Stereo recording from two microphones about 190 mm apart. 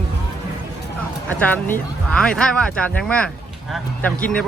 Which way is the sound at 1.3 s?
10° left (ahead or behind).